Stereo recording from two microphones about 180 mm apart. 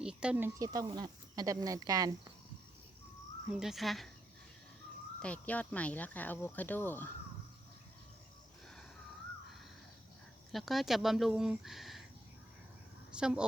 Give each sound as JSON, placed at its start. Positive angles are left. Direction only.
{"t": 0.0, "sound": "speech", "side_deg": -5}
{"t": 3.5, "sound": "speech", "side_deg": 0}
{"t": 5.2, "sound": "speech", "side_deg": 10}
{"t": 10.5, "sound": "speech", "side_deg": 0}
{"t": 13.1, "sound": "speech", "side_deg": -5}